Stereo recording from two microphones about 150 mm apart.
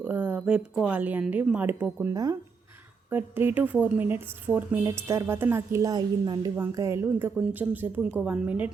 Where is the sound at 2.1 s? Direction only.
25° right (ahead or behind).